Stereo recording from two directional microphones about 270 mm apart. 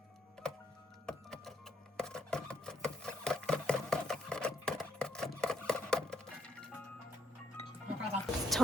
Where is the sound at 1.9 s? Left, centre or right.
Centre.